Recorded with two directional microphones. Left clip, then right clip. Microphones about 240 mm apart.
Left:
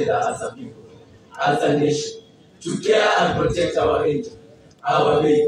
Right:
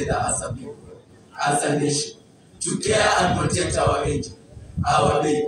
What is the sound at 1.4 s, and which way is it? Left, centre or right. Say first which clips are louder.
Speech: left 3 dB; right.